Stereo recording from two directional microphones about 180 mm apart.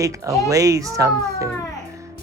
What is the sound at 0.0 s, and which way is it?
Speech, 20° right (ahead or behind).